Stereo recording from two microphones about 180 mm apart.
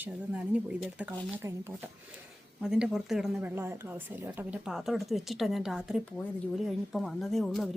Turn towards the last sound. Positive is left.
turn(degrees=0)  # may be behind; listen again after turning